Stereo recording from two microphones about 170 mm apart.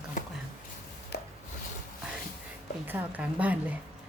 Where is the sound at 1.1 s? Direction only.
80° left.